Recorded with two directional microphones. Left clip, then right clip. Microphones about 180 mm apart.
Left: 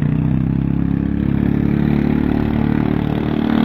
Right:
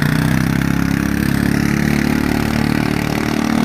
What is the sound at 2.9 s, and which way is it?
Vehicle, 55° right (ahead or behind).